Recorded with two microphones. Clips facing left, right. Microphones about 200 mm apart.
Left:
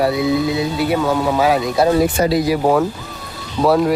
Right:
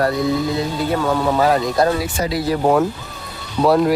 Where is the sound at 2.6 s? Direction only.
Centre (ahead or behind).